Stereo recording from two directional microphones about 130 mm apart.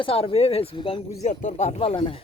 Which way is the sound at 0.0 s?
45° left (ahead or behind).